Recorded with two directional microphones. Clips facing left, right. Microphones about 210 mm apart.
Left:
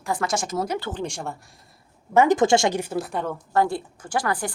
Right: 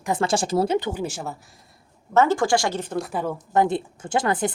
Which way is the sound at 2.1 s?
15° left (ahead or behind).